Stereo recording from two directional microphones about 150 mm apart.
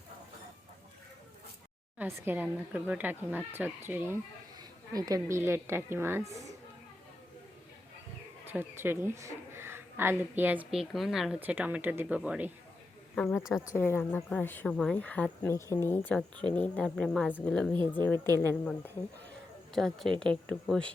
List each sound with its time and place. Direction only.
2.0 s speech: 10° right (ahead or behind)
8.4 s speech: 15° right (ahead or behind)
13.7 s speech: 15° left (ahead or behind)
19.7 s speech: 5° left (ahead or behind)